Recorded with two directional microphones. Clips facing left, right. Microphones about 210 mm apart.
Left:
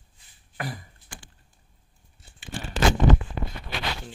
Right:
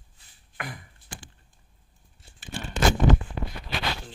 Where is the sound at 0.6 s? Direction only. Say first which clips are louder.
Left 4 dB; 35° left (ahead or behind).